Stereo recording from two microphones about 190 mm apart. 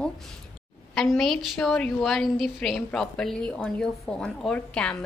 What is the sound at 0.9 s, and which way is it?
A woman's voice, centre (ahead or behind).